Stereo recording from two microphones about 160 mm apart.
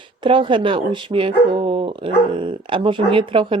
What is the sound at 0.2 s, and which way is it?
Speech, 30° right (ahead or behind).